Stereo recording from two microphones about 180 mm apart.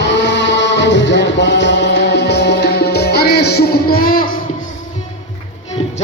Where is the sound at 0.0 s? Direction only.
75° left (ahead or behind); by 4.3 s 55° left (ahead or behind).